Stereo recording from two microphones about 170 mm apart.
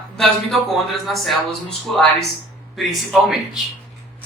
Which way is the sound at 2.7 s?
Centre (ahead or behind).